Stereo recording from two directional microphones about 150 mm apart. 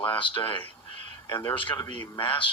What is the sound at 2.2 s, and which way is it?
Speech, 35° left (ahead or behind).